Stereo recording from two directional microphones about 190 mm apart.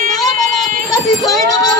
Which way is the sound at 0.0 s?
45° right (ahead or behind).